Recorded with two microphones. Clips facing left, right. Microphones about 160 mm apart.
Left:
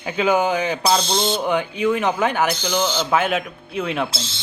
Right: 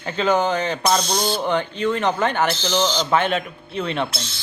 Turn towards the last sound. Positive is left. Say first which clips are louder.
# left 1 dB
turn(degrees=25)  # may be behind; listen again after turning